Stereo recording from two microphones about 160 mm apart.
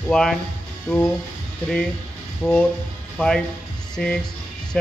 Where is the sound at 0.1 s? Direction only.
5° left (ahead or behind).